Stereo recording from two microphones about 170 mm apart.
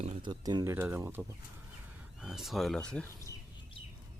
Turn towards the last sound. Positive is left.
turn(degrees=5)  # may be behind; listen again after turning